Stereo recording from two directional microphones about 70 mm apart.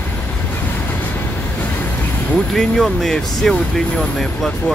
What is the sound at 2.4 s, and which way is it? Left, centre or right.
Speech, centre.